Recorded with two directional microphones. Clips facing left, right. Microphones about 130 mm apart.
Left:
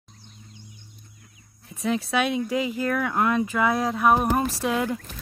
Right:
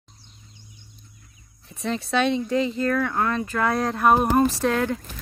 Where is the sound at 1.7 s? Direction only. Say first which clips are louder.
Left 1 dB; 5° left (ahead or behind).